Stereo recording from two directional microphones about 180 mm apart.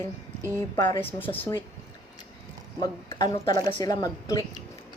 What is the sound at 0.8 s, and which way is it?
Speech, 30° left (ahead or behind).